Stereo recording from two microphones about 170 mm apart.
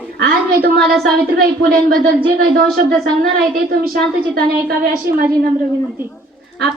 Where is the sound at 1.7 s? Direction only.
60° right (ahead or behind).